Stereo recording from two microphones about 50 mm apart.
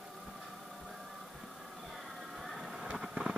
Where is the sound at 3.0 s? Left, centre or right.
Centre.